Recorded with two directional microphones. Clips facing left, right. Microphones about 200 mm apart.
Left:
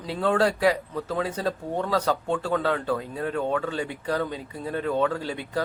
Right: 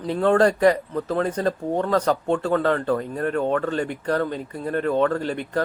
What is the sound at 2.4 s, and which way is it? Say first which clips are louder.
A man's voice: right 4 dB; 5° left (ahead or behind).